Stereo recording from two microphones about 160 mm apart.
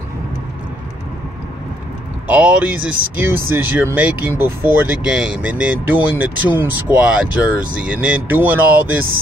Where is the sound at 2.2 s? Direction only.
10° right (ahead or behind).